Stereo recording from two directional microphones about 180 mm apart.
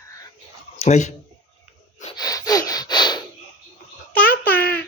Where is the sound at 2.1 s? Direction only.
20° left (ahead or behind).